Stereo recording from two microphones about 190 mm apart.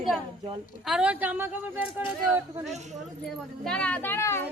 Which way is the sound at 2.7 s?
35° right (ahead or behind).